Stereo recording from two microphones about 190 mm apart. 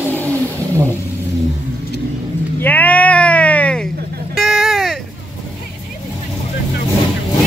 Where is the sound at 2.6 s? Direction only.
10° left (ahead or behind).